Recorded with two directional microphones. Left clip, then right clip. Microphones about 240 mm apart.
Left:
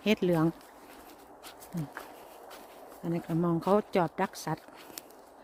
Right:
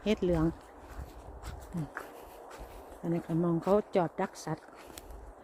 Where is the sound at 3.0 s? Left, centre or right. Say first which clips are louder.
Left 1 dB; centre.